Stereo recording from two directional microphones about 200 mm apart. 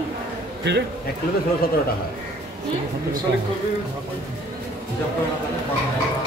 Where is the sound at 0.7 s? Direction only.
60° right (ahead or behind).